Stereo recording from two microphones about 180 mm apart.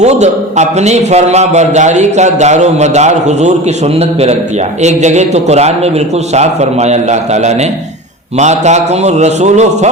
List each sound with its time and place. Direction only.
0.0 s a man's voice: 40° right (ahead or behind)